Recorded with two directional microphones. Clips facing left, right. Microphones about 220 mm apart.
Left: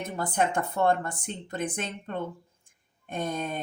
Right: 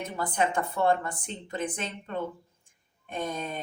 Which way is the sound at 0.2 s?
45° left (ahead or behind).